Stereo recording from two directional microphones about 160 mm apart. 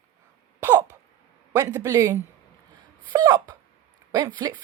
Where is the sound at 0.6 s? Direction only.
10° right (ahead or behind).